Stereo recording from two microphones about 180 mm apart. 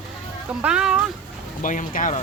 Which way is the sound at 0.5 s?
5° right (ahead or behind).